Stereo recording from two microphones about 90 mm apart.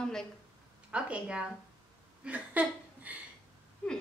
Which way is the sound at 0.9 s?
15° right (ahead or behind).